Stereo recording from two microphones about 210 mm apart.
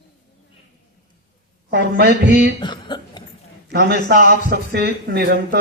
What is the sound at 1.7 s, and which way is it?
Speech, 50° right (ahead or behind).